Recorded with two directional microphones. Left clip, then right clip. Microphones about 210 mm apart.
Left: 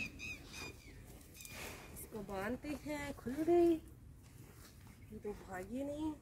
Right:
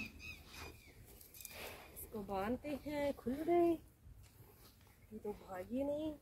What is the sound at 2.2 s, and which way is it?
Speech, 20° left (ahead or behind).